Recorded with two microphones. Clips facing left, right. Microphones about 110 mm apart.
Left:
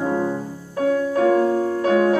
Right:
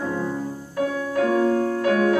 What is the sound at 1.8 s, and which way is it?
Music, 25° left (ahead or behind).